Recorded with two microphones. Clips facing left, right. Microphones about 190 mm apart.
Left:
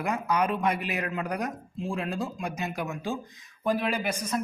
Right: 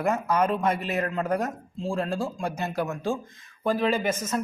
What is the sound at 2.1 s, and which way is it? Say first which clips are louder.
Speech: right 3 dB; 30° right (ahead or behind).